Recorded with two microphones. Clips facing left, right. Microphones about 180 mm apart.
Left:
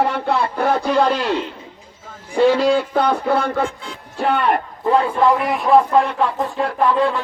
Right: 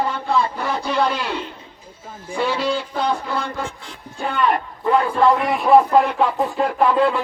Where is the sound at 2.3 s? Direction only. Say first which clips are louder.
Left 7 dB; 45° left (ahead or behind); by 4.6 s 60° left (ahead or behind).